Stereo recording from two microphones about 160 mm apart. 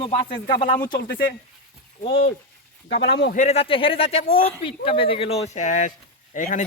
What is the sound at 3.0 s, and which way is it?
Speech, 90° left.